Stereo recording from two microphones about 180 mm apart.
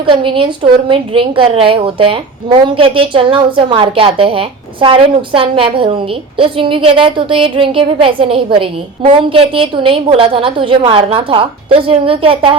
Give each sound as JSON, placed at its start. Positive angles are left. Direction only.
{"t": 0.0, "sound": "a woman's voice", "side_deg": -30}